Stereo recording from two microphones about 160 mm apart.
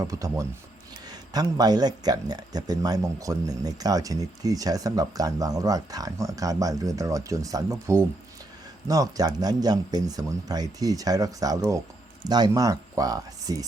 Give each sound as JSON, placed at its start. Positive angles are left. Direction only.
{"t": 0.0, "sound": "speech", "side_deg": -20}